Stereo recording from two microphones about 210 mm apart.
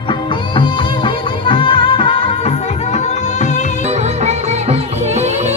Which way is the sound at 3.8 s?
30° right (ahead or behind).